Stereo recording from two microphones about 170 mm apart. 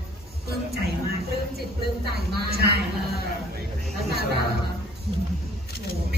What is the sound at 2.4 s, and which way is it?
Speech, 70° right (ahead or behind).